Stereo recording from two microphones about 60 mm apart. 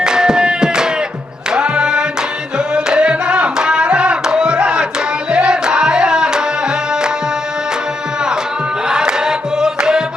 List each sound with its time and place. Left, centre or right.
0.0 s music: centre
8.9 s music: centre